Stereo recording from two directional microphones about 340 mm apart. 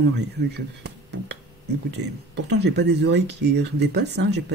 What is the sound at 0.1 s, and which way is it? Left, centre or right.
Speech, right.